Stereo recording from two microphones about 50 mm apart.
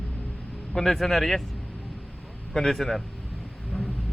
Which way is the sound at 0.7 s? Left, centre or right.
Centre.